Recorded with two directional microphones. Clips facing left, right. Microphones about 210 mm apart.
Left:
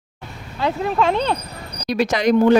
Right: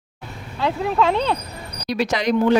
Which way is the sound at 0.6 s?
Centre (ahead or behind).